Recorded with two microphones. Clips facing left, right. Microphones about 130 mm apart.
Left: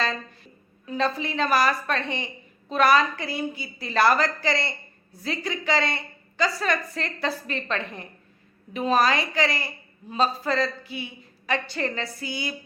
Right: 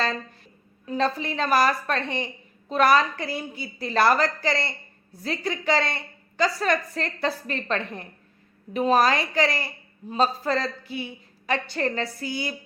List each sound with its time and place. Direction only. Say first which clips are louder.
0.9 s a woman's voice: right 1 dB; 40° right (ahead or behind)